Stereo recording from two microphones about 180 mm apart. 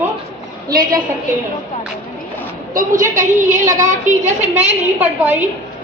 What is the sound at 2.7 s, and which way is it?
A woman's voice, 50° right (ahead or behind).